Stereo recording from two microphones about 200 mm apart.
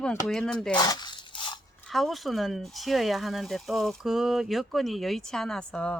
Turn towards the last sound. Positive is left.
turn(degrees=5)  # may be behind; listen again after turning